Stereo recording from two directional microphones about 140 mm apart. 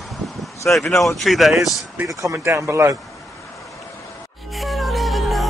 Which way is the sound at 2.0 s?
25° right (ahead or behind).